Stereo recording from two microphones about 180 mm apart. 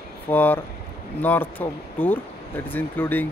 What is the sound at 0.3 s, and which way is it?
Speech, 10° left (ahead or behind).